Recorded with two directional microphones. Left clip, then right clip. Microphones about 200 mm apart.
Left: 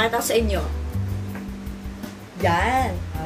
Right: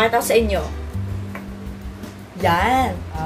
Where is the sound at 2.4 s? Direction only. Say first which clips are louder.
Right 3 dB; 20° right (ahead or behind).